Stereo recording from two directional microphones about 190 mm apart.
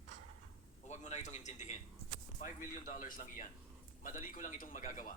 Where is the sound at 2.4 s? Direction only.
45° left (ahead or behind).